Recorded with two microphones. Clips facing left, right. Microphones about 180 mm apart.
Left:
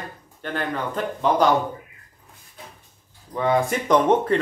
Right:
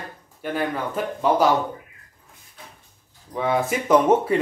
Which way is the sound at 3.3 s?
5° right (ahead or behind).